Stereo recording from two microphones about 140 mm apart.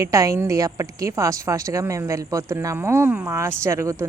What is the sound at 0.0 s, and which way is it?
A woman's voice, 25° right (ahead or behind).